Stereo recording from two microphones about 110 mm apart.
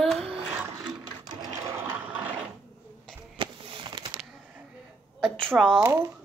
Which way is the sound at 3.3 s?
45° right (ahead or behind).